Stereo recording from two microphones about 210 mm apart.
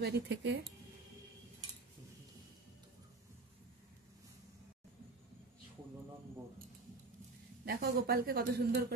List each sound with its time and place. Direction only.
0.0 s speech: 55° right (ahead or behind)
7.6 s a woman's voice: 45° right (ahead or behind)